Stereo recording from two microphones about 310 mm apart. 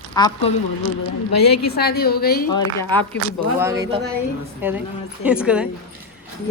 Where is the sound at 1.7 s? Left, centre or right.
Left.